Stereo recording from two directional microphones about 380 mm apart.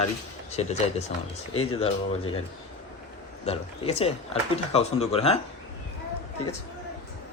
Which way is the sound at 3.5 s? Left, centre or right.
Centre.